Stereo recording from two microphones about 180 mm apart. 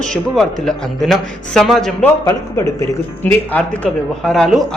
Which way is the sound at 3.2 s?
10° left (ahead or behind).